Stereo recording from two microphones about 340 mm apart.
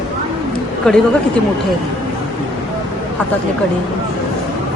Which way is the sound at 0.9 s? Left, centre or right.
Centre.